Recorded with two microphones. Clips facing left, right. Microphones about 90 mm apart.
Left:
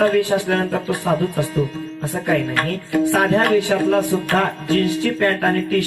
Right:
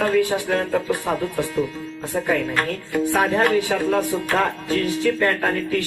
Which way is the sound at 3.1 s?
40° left (ahead or behind).